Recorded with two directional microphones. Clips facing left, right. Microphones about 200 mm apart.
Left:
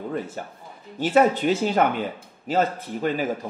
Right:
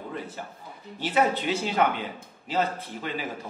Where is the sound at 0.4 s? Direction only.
50° left (ahead or behind).